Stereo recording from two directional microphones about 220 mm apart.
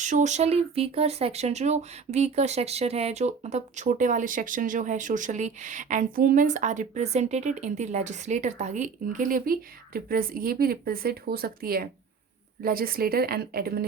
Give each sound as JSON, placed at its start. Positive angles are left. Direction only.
{"t": 0.0, "sound": "a woman's voice", "side_deg": -35}